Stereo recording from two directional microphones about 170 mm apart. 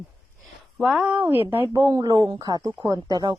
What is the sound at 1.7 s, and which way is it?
Speech, 20° right (ahead or behind).